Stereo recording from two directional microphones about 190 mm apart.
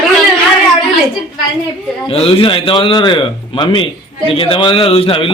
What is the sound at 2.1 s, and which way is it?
A man's voice, 30° left (ahead or behind).